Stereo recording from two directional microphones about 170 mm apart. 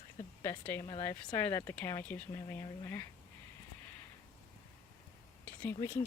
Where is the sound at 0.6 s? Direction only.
10° left (ahead or behind).